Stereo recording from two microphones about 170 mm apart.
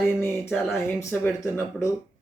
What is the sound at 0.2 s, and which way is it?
Speech, 10° left (ahead or behind).